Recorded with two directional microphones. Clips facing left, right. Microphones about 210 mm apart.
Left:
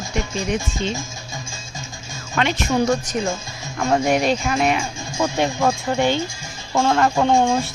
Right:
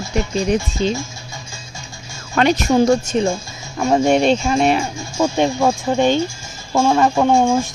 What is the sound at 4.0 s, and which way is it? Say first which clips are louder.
Speech: right 4 dB; 30° right (ahead or behind).